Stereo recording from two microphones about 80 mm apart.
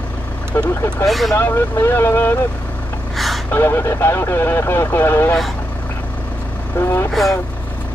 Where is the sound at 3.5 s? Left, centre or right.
Left.